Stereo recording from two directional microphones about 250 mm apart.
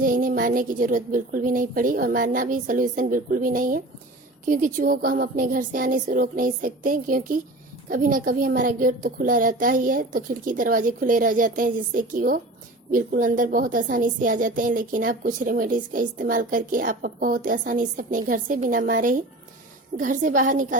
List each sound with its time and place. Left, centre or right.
0.0 s speech: right